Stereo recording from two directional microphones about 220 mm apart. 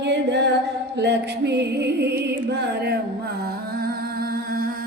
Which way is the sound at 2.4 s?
50° right (ahead or behind).